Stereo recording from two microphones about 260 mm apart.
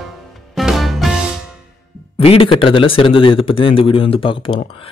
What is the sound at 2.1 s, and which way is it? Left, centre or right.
Speech, left.